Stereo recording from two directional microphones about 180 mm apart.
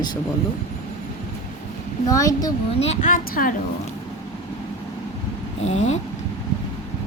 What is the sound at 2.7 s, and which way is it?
Speech, 35° left (ahead or behind).